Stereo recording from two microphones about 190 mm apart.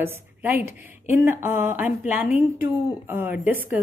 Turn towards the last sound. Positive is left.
turn(degrees=-10)  # may be behind; listen again after turning